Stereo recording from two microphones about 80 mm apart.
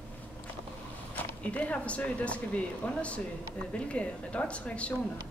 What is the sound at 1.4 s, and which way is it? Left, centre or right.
Speech, centre.